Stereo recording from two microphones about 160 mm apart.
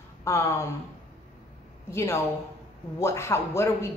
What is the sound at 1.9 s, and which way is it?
A woman's voice, 15° left (ahead or behind).